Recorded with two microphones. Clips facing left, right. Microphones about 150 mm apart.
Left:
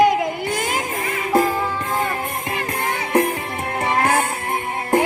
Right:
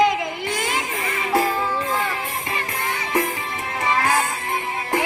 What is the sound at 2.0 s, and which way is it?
Music, 50° left (ahead or behind).